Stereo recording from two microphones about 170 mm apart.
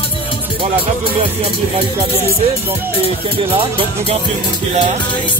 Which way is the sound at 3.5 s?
30° right (ahead or behind).